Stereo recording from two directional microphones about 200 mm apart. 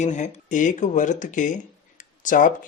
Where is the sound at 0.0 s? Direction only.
35° left (ahead or behind).